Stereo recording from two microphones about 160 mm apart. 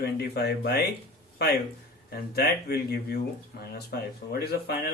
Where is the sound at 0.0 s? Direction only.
90° left.